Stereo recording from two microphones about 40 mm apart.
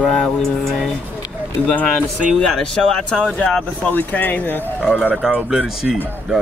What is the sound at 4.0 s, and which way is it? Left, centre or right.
Speech, left.